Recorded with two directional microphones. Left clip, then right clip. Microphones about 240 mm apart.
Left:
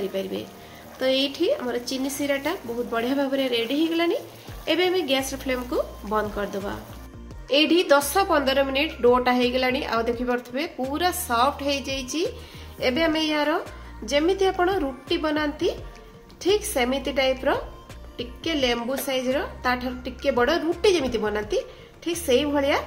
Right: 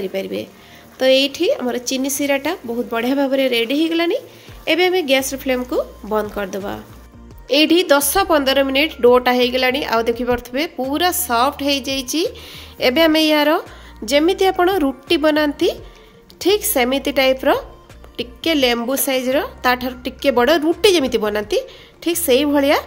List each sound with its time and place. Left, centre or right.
0.1 s a woman's voice: right